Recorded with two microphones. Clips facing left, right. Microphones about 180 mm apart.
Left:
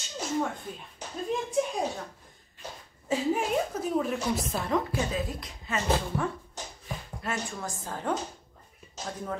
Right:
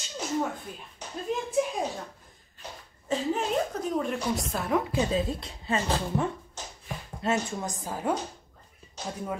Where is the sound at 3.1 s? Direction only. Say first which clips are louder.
Left 1 dB; 10° left (ahead or behind).